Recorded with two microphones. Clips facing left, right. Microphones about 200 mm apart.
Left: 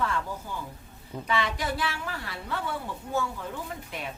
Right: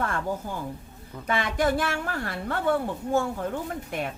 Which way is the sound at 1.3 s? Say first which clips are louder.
Right 5 dB; 50° right (ahead or behind).